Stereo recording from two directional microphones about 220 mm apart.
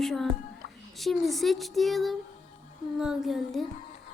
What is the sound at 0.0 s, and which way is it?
Speech, centre (ahead or behind).